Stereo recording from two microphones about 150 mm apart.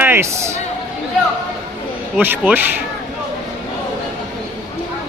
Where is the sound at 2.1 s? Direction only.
10° right (ahead or behind).